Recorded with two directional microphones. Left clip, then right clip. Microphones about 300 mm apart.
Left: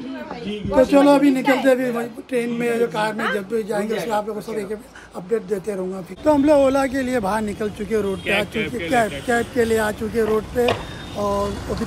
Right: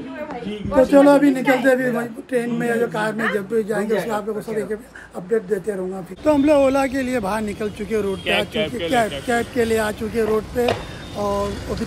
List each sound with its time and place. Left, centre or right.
0.8 s a man's voice: centre
8.6 s a man's voice: centre
9.3 s a man's voice: centre